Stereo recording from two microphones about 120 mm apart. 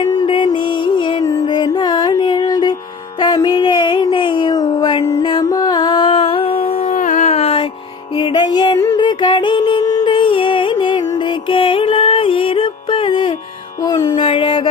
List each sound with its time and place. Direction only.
0.0 s music: 35° left (ahead or behind)
3.2 s a sound: 35° left (ahead or behind)
5.2 s music: 40° left (ahead or behind); by 7.7 s 55° left (ahead or behind)
8.1 s music: 35° left (ahead or behind)